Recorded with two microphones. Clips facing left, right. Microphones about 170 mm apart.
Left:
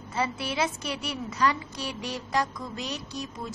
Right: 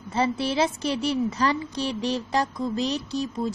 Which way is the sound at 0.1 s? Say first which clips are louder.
Right 6 dB; 30° right (ahead or behind).